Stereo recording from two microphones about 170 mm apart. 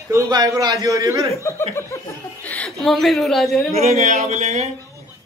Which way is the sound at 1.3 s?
15° left (ahead or behind).